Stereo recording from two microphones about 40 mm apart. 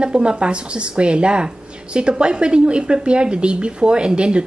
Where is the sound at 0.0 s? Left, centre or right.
Right.